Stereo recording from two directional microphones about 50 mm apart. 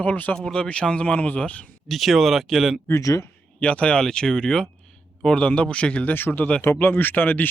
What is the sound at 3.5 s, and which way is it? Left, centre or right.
Speech, left.